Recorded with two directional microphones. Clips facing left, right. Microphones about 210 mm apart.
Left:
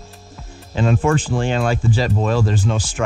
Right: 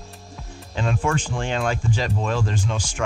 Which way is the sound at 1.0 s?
5° left (ahead or behind).